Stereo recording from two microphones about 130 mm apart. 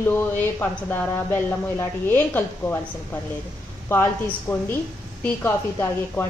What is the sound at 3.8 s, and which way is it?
A woman's voice, 15° left (ahead or behind).